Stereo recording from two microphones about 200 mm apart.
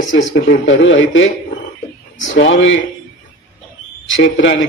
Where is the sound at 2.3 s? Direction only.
70° left (ahead or behind).